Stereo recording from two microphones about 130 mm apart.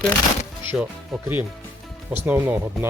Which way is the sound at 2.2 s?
20° right (ahead or behind).